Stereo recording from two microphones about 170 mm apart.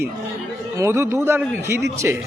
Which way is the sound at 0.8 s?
15° right (ahead or behind).